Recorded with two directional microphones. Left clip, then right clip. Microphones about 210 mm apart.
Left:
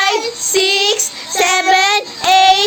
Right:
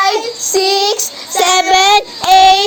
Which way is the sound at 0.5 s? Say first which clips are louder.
Right 1 dB; 10° right (ahead or behind).